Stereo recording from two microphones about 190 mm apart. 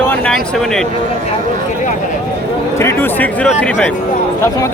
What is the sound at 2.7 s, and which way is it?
Speech, 10° left (ahead or behind).